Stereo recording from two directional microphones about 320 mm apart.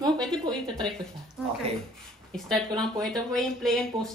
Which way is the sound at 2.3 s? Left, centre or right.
Centre.